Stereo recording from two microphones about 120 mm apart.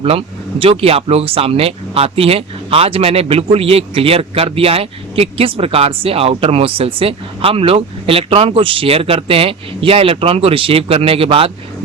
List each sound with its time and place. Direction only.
0.0 s speech: 50° right (ahead or behind)